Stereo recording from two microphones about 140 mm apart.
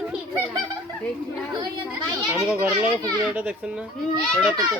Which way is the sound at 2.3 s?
10° right (ahead or behind).